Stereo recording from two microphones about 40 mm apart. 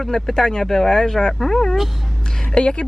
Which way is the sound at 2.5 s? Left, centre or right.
Left.